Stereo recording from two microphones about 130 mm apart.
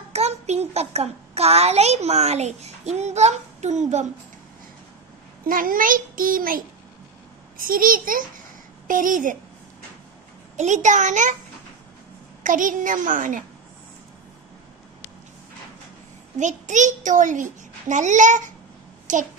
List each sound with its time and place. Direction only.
0.1 s a child's voice: 55° right (ahead or behind)
5.5 s a child's voice: 90° right
10.5 s a child's voice: 65° right (ahead or behind)
12.4 s a child's voice: 90° right
16.3 s a child's voice: 70° right (ahead or behind)